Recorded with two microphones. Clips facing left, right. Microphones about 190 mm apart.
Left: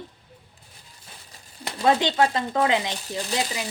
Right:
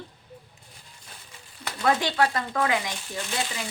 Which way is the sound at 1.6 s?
20° left (ahead or behind).